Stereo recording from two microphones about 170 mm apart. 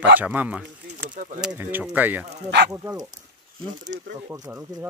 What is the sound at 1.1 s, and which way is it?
Speech, 50° right (ahead or behind).